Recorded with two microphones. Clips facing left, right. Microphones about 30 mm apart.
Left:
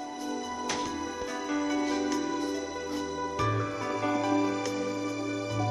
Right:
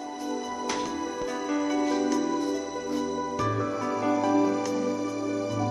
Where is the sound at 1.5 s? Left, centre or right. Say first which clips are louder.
Right 3 dB; centre.